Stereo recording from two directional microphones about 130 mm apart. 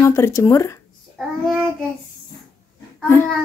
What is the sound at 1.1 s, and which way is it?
Child singing, centre (ahead or behind).